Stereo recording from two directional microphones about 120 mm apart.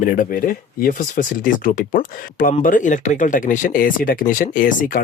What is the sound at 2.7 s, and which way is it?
Speech, 90° left.